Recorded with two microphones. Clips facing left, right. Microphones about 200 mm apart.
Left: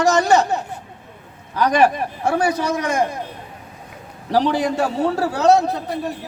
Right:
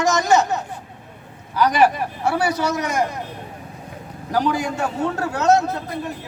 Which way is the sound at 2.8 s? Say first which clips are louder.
Left 2 dB; 30° left (ahead or behind).